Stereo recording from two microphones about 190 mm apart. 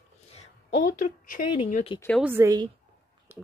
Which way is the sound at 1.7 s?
35° left (ahead or behind).